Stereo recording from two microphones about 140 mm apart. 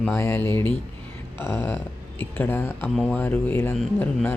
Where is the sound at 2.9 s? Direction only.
Centre (ahead or behind).